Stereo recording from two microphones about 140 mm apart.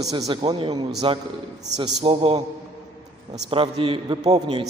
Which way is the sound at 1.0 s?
40° right (ahead or behind).